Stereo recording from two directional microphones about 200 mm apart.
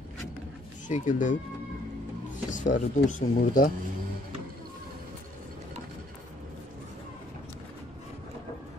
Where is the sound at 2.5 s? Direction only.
40° left (ahead or behind).